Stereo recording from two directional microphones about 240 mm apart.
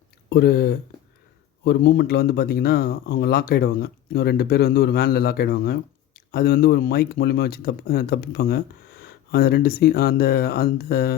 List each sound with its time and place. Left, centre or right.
0.3 s speech: left